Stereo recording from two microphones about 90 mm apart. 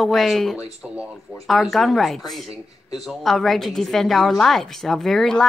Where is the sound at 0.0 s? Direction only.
Centre (ahead or behind).